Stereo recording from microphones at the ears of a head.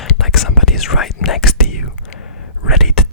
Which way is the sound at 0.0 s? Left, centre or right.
Left.